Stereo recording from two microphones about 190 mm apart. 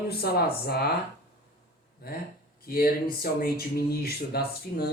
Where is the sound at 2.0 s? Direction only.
55° left (ahead or behind).